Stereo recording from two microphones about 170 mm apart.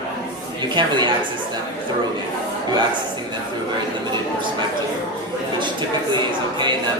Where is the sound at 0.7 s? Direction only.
25° right (ahead or behind).